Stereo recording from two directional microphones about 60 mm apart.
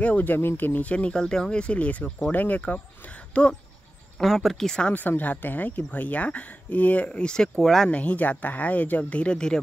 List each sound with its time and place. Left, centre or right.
0.0 s speech: left
4.2 s speech: centre
4.9 s speech: left; by 7.9 s centre
7.9 s speech: left